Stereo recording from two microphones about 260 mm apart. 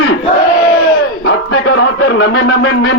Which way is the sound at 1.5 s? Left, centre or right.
Left.